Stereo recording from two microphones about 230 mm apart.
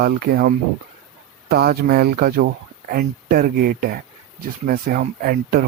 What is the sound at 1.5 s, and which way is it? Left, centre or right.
Speech, right.